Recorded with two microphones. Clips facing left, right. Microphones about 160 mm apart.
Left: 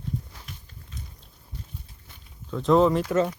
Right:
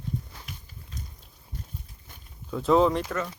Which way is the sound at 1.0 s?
40° right (ahead or behind).